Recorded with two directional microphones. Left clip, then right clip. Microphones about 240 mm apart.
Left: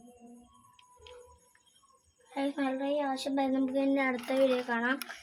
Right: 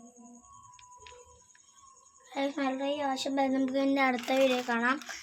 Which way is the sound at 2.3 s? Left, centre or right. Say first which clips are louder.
Right 1 dB; right.